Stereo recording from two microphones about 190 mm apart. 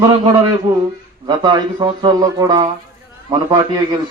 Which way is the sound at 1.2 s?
20° right (ahead or behind).